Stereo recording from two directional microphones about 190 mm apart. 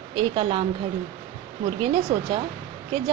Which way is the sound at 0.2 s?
30° right (ahead or behind).